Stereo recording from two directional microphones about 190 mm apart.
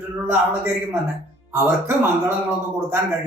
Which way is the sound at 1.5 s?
15° right (ahead or behind).